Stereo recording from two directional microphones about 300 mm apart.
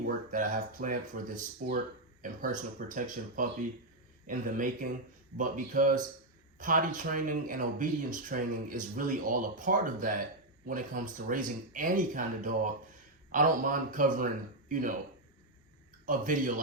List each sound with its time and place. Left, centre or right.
0.3 s speech: right
16.0 s speech: right